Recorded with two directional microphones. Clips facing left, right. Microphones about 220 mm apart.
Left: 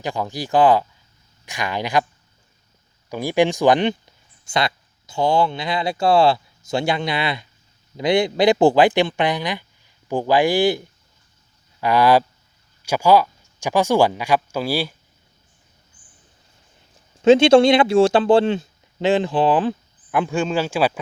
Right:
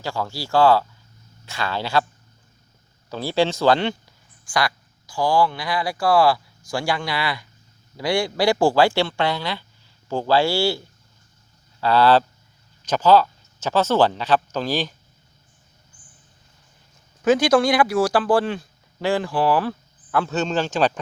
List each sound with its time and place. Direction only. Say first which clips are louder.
0.0 s speech: left 2 dB; 20° left (ahead or behind)
3.1 s speech: left 3 dB; 15° left (ahead or behind)
17.2 s speech: left 6 dB; 25° left (ahead or behind); by 21.0 s 10° left (ahead or behind)